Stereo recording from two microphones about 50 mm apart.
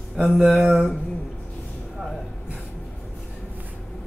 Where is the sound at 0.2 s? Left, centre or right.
Centre.